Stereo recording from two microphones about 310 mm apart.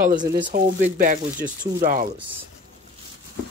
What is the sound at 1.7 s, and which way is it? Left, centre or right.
Speech, right.